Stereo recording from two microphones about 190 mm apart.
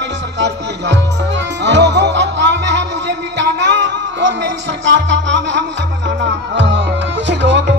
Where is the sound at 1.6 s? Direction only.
65° right (ahead or behind).